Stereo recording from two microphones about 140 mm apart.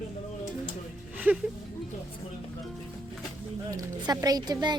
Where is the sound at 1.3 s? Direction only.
10° right (ahead or behind).